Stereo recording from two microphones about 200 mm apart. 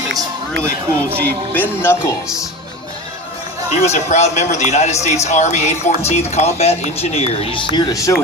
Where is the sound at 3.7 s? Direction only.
35° left (ahead or behind).